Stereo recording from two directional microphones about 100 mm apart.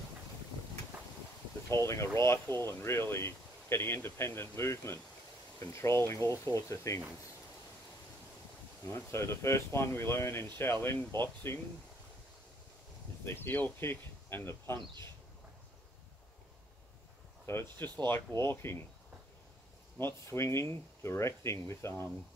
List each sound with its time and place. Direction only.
1.7 s speech: 30° left (ahead or behind)
8.8 s speech: 25° left (ahead or behind)
13.2 s speech: 20° left (ahead or behind)
17.5 s speech: 25° left (ahead or behind)
20.0 s speech: 25° left (ahead or behind)